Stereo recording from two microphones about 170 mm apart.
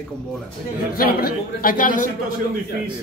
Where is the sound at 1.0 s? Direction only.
60° left (ahead or behind).